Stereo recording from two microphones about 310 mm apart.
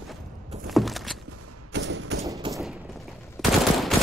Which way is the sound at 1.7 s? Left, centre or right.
Right.